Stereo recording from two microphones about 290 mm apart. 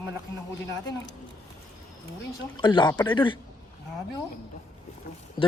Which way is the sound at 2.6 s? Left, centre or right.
Centre.